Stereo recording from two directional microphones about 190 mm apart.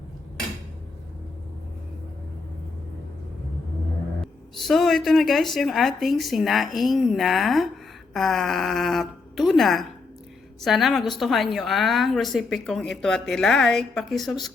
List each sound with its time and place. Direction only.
4.2 s speech: centre (ahead or behind)